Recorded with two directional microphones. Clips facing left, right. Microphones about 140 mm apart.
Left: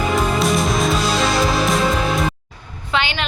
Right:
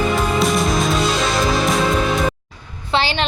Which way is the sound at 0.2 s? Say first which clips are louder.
Even; centre (ahead or behind).